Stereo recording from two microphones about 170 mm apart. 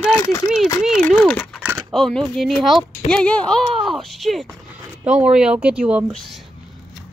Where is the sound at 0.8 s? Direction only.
Centre (ahead or behind).